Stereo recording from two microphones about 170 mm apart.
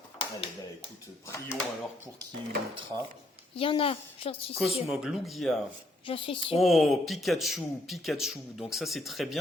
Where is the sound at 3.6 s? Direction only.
30° left (ahead or behind).